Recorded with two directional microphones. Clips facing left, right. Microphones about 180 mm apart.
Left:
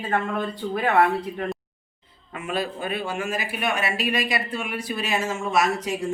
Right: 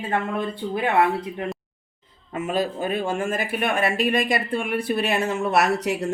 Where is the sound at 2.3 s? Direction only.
40° right (ahead or behind).